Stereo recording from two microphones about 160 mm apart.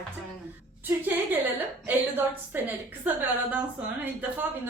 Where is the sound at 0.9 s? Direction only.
10° right (ahead or behind).